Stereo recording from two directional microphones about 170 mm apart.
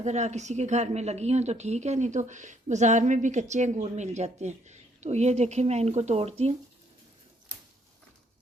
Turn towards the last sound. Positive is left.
turn(degrees=-35)  # may be behind; listen again after turning